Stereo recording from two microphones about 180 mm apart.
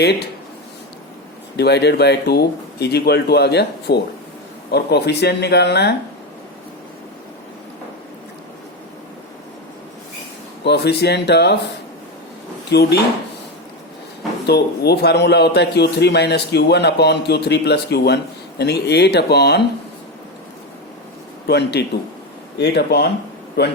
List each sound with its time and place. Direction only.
1.5 s a man's voice: 65° left (ahead or behind)
10.6 s a man's voice: 70° left (ahead or behind)
12.7 s speech: 65° left (ahead or behind)
14.4 s a man's voice: 65° left (ahead or behind)
21.4 s a man's voice: 65° left (ahead or behind)